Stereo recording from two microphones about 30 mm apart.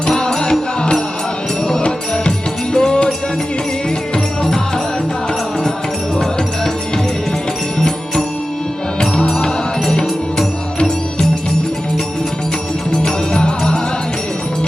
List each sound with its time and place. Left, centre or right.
0.2 s music: left
2.7 s music: left
7.8 s music: centre
9.0 s music: left